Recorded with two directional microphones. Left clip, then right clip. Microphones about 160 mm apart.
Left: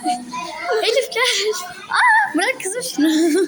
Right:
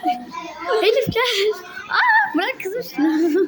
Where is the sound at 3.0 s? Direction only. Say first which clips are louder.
Left 2 dB; 30° left (ahead or behind).